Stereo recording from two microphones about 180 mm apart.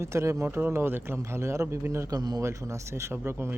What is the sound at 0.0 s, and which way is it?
A man's voice, 15° right (ahead or behind).